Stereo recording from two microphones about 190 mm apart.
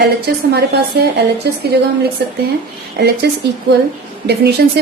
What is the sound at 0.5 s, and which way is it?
A woman's voice, 60° right (ahead or behind).